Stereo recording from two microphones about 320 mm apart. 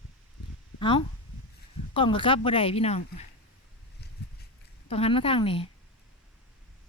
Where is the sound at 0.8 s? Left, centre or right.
Centre.